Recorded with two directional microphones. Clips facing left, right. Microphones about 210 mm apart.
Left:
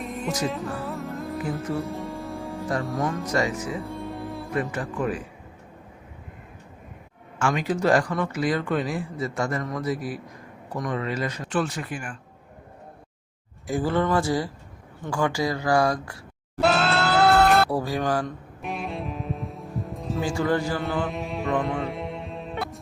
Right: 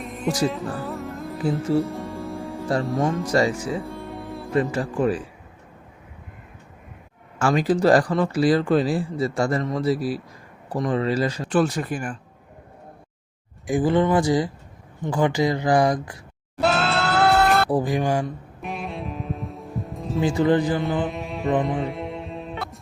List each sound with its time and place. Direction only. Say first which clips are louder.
0.0 s music: right 4 dB; centre (ahead or behind)
1.4 s speech: right 8 dB; 30° right (ahead or behind)
1.9 s music: right 1 dB; centre (ahead or behind)
3.2 s speech: right 4 dB; 30° right (ahead or behind)
3.8 s music: left 1 dB; centre (ahead or behind)
4.5 s speech: right 6 dB; 30° right (ahead or behind)
7.3 s speech: right 5 dB; 35° right (ahead or behind)
13.7 s speech: right 4 dB; 15° right (ahead or behind)
16.6 s music: even; centre (ahead or behind)
17.7 s speech: right 3 dB; 15° right (ahead or behind)
18.6 s music: even; centre (ahead or behind)
20.2 s speech: right 5 dB; 20° right (ahead or behind)
20.8 s music: right 2 dB; centre (ahead or behind)